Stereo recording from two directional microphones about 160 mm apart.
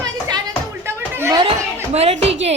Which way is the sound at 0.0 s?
25° right (ahead or behind).